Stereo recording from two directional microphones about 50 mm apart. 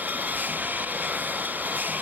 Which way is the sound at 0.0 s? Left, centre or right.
Right.